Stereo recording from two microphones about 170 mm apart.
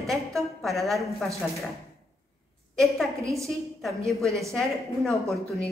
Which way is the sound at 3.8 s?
Centre (ahead or behind).